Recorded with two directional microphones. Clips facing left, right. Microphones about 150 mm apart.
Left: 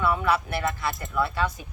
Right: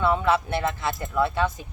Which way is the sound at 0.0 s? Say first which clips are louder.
Right 2 dB; 25° right (ahead or behind).